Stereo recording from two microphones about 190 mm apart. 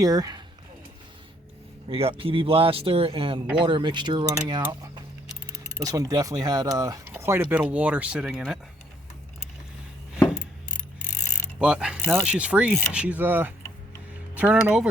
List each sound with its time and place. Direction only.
0.0 s speech: 20° right (ahead or behind)
1.9 s speech: 30° right (ahead or behind); by 8.5 s 5° right (ahead or behind)
11.6 s speech: 5° right (ahead or behind)